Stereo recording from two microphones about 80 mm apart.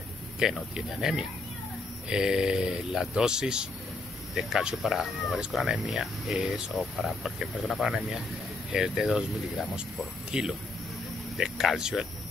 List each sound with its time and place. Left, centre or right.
0.4 s speech: centre